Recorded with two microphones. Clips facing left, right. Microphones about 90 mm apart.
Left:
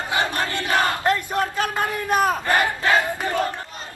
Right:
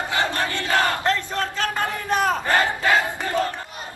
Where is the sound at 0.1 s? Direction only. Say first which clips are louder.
Left 2 dB; 15° left (ahead or behind).